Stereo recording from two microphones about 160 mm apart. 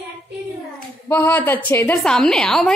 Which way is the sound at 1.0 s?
15° left (ahead or behind).